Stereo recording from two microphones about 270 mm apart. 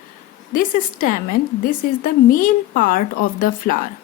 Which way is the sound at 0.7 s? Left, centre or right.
Left.